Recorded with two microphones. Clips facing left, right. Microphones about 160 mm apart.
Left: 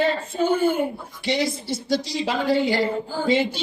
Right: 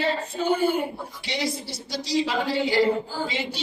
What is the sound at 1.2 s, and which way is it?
A woman's voice, 50° left (ahead or behind).